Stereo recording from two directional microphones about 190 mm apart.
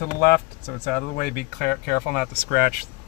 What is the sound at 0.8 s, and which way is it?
Speech, 50° left (ahead or behind).